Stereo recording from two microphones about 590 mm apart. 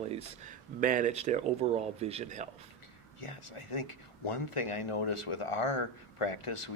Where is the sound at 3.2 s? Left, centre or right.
Left.